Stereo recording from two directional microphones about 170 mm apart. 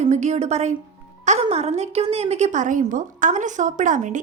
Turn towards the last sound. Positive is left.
turn(degrees=-45)  # may be behind; listen again after turning